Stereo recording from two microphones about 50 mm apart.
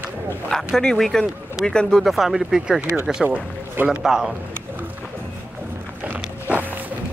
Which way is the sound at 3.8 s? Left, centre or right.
Centre.